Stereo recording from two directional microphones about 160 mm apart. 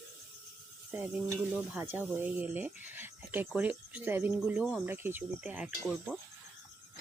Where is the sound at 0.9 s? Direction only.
10° right (ahead or behind).